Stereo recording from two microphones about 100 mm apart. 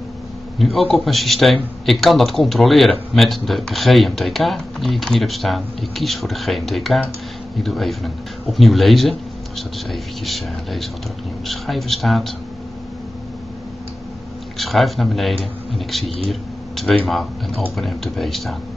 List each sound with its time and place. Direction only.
0.6 s speech: centre (ahead or behind)
14.6 s speech: centre (ahead or behind)
16.3 s a sound: centre (ahead or behind)
17.7 s speech: centre (ahead or behind)